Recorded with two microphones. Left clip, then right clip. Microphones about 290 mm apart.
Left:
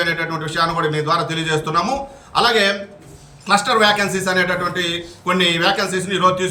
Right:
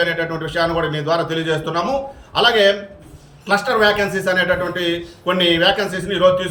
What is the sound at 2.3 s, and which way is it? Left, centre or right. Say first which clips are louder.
A man's voice: right 2 dB; left.